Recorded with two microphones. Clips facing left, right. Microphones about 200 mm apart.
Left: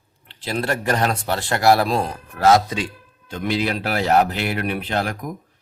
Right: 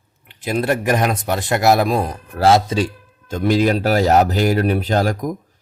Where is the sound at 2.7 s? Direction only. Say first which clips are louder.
Right 7 dB; 40° right (ahead or behind).